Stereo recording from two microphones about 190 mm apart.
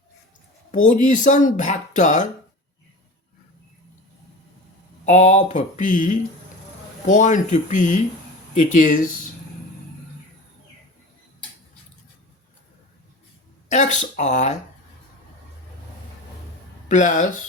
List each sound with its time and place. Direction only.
0.9 s speech: 40° left (ahead or behind)
5.0 s speech: 40° left (ahead or behind)
13.7 s speech: 40° left (ahead or behind)
16.9 s speech: 40° left (ahead or behind)